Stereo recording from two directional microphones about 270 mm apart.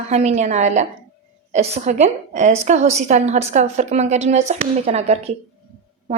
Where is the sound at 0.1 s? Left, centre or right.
Right.